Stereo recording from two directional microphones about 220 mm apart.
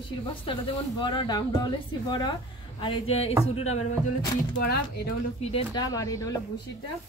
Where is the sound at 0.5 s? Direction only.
20° left (ahead or behind).